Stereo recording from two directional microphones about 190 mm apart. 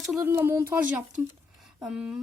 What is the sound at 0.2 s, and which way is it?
Speech, 15° right (ahead or behind).